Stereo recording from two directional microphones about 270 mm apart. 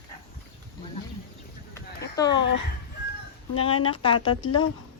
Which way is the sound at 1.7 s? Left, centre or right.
Centre.